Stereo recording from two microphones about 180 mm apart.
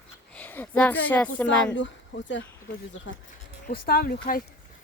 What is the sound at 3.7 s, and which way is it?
Speech, 60° left (ahead or behind).